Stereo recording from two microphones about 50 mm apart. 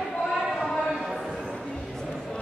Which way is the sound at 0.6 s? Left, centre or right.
Centre.